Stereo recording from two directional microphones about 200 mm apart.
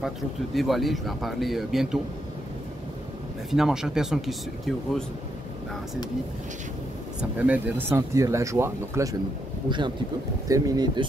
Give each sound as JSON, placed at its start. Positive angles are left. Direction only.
{"t": 0.6, "sound": "speech", "side_deg": 0}
{"t": 3.4, "sound": "speech", "side_deg": 0}
{"t": 7.2, "sound": "speech", "side_deg": -5}